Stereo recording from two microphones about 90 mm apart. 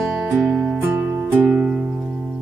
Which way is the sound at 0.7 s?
20° right (ahead or behind).